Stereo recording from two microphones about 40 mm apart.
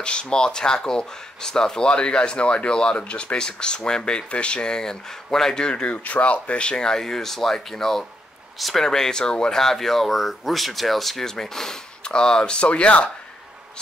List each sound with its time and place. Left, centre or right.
0.0 s speech: left
3.0 s speech: left
5.9 s speech: left
6.7 s speech: centre
8.8 s speech: centre
9.6 s speech: centre
12.0 s speech: left